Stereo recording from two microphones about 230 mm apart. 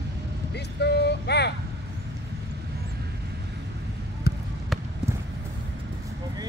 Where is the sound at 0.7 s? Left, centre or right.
Left.